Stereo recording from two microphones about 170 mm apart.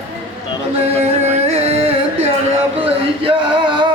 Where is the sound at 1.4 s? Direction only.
35° right (ahead or behind).